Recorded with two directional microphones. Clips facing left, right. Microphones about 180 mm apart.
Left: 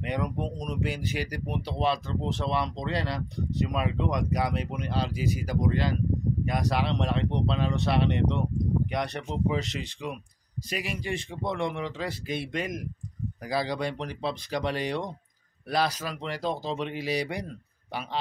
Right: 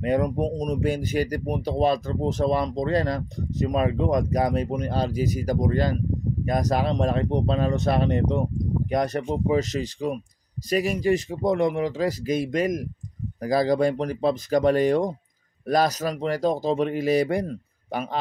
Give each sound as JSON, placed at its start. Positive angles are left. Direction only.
{"t": 0.0, "sound": "speech", "side_deg": -40}